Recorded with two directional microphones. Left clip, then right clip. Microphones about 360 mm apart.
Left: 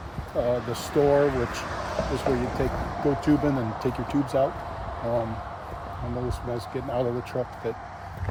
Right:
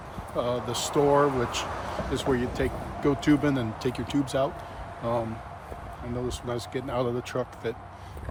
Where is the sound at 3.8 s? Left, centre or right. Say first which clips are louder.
Left 2 dB; centre.